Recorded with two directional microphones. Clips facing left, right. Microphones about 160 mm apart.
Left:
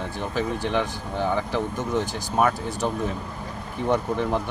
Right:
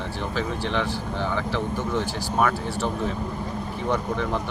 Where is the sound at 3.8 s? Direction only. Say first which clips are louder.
Left 3 dB; 15° left (ahead or behind).